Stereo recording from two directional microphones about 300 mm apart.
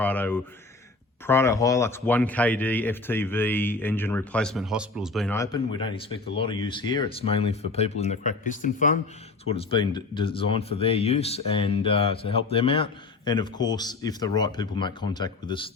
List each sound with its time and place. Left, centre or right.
0.0 s speech: centre